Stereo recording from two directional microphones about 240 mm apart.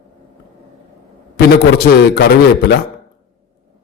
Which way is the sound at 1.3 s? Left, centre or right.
Left.